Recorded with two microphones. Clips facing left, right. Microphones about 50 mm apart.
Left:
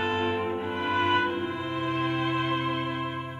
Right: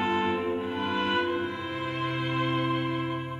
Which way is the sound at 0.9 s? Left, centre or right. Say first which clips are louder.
Left 4 dB; left.